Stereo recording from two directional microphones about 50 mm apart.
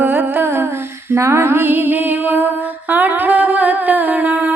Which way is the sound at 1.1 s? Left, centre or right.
Right.